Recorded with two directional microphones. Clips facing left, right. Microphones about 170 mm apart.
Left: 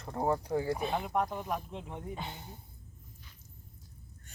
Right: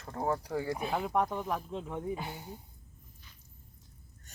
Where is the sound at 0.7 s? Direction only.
5° right (ahead or behind).